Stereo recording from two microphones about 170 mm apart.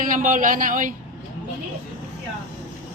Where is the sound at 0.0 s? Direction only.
55° right (ahead or behind).